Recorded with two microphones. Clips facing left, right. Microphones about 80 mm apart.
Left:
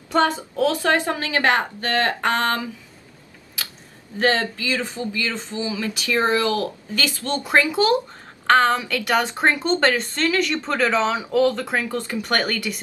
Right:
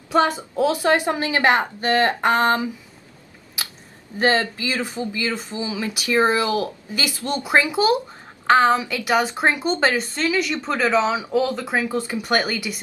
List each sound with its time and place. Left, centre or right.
0.4 s speech: centre
4.2 s speech: right